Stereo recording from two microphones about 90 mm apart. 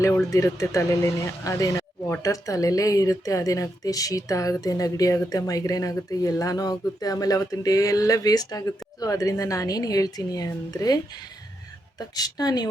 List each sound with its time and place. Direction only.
0.0 s a woman's voice: 35° left (ahead or behind)